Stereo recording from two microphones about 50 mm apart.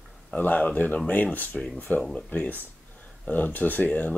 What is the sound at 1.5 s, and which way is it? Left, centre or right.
Speech, centre.